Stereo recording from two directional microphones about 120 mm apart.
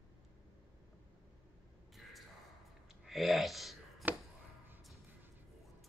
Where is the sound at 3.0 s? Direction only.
Centre (ahead or behind).